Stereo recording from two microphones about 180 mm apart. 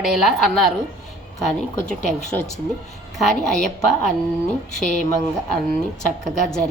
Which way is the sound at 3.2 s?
Centre (ahead or behind).